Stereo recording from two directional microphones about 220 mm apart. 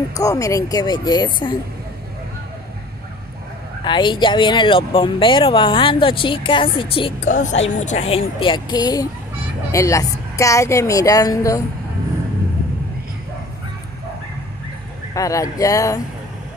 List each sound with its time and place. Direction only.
0.1 s a woman's voice: 15° left (ahead or behind)
3.8 s speech: 20° left (ahead or behind)
7.2 s a woman's voice: 35° left (ahead or behind); by 11.6 s 15° left (ahead or behind)
15.1 s a woman's voice: 15° left (ahead or behind)